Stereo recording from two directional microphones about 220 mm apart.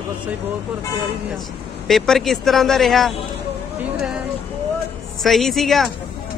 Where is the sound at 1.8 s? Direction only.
Centre (ahead or behind).